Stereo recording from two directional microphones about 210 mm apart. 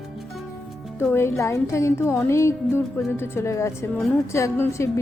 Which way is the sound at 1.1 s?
10° left (ahead or behind).